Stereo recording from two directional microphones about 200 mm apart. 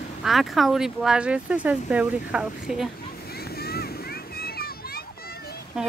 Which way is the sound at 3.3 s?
50° left (ahead or behind).